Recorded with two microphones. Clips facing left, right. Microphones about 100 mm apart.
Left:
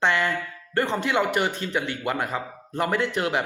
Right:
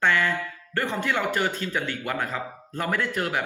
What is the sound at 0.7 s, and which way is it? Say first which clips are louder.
Speech: left 3 dB; 20° left (ahead or behind).